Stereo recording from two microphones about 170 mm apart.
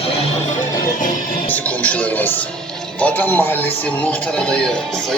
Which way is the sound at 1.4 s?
10° left (ahead or behind).